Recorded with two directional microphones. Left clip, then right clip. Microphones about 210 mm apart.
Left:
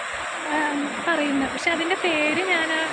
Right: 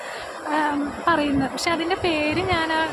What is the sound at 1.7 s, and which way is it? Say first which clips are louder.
Speech: right 1 dB; 15° right (ahead or behind).